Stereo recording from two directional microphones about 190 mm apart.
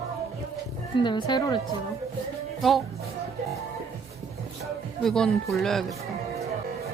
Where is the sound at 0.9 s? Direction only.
25° left (ahead or behind).